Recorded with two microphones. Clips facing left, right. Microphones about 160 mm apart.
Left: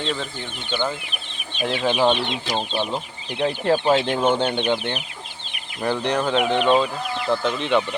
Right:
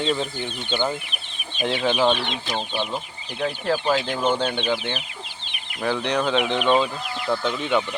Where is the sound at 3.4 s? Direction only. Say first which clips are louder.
Left 4 dB; 25° left (ahead or behind).